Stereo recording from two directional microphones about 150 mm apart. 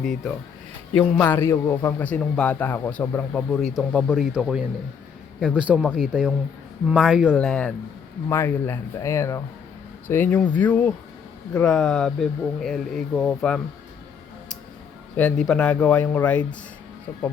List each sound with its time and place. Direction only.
0.0 s a man's voice: 5° left (ahead or behind)
7.3 s a man's voice: 10° left (ahead or behind)
15.1 s a man's voice: 5° left (ahead or behind)